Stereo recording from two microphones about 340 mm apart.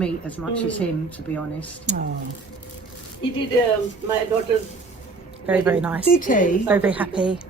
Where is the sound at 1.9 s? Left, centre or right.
Right.